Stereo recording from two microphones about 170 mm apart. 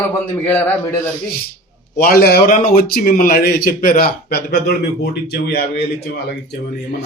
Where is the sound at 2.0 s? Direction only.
65° left (ahead or behind).